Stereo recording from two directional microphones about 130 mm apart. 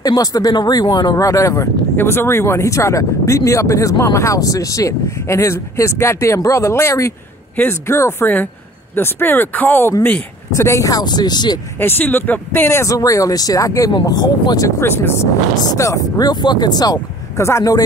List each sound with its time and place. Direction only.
0.0 s speech: 30° left (ahead or behind)
11.8 s speech: 15° left (ahead or behind); by 14.7 s 30° left (ahead or behind)
14.8 s speech: 20° left (ahead or behind)